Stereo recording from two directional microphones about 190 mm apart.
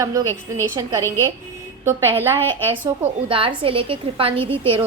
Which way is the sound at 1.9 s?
10° right (ahead or behind).